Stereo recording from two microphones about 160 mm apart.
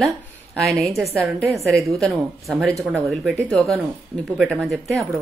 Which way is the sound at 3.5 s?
5° left (ahead or behind).